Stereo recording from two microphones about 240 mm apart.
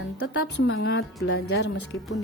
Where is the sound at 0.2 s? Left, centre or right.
Left.